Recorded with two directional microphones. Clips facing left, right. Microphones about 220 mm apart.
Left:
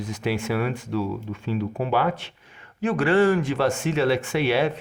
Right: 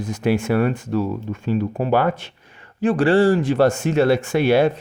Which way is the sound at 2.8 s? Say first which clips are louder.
Right 4 dB; 35° right (ahead or behind).